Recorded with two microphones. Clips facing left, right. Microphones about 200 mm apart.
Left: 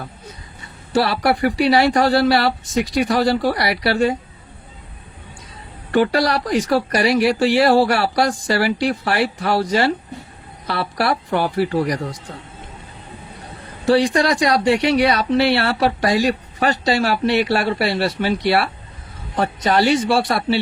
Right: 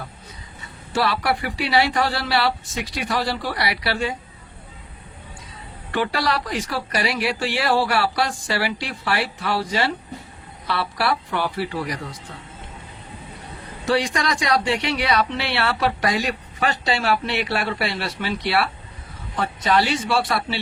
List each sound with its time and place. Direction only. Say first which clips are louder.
0.9 s speech: left 5 dB; 40° left (ahead or behind)
5.9 s speech: left 6 dB; 45° left (ahead or behind)
13.8 s speech: left 6 dB; 35° left (ahead or behind)